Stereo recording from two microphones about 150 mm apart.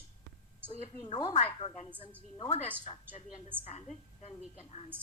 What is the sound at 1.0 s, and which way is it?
A woman's voice, 35° left (ahead or behind).